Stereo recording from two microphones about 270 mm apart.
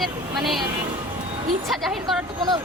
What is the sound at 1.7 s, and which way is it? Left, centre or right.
Speech, centre.